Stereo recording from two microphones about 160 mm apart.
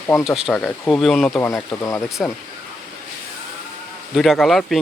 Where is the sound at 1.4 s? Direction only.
20° left (ahead or behind).